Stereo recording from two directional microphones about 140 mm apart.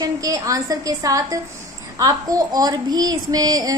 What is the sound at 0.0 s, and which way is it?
Female singing, 25° right (ahead or behind).